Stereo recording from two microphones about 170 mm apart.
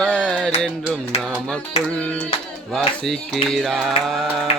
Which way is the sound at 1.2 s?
5° left (ahead or behind).